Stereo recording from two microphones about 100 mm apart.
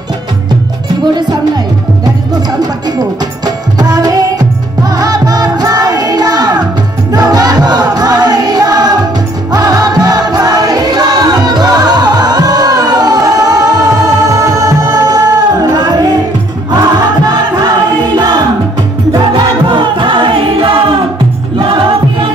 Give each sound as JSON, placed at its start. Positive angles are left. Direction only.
{"t": 3.7, "sound": "music", "side_deg": -40}
{"t": 19.3, "sound": "music", "side_deg": -50}